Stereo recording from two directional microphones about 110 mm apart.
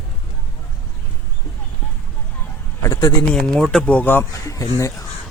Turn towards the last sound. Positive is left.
turn(degrees=30)  # may be behind; listen again after turning